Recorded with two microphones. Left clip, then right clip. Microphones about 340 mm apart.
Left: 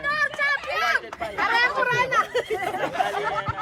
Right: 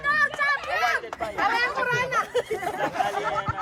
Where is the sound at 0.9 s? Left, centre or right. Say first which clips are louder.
Left 2 dB; left.